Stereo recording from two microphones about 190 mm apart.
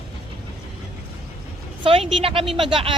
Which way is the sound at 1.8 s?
30° right (ahead or behind).